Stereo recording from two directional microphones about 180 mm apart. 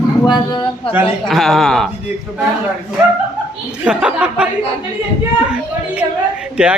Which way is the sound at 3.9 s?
5° right (ahead or behind).